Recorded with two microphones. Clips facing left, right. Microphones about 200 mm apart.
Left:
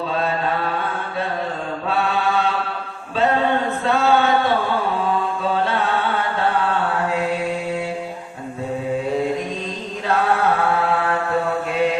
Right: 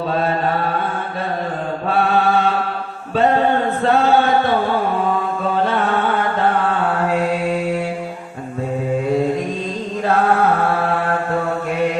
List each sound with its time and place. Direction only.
2.0 s mantra: 50° right (ahead or behind)
3.8 s chant: 50° right (ahead or behind)
5.6 s music: 50° right (ahead or behind)